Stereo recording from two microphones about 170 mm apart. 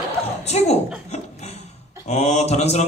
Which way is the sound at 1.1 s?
40° left (ahead or behind).